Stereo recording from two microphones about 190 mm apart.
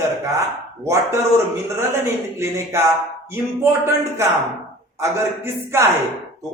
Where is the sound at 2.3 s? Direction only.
15° right (ahead or behind).